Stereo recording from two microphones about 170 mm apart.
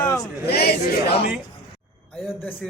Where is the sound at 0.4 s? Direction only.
70° left (ahead or behind).